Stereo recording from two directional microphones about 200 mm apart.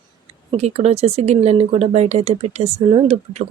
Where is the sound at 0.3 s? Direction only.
30° right (ahead or behind).